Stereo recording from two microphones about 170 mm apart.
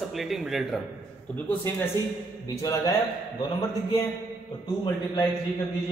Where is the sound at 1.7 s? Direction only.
10° left (ahead or behind).